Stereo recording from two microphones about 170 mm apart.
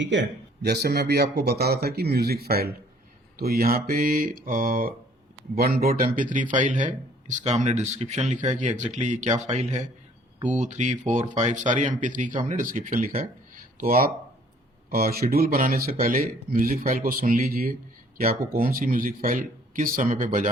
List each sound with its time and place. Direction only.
0.0 s speech: 90° right; by 20.5 s 50° right (ahead or behind)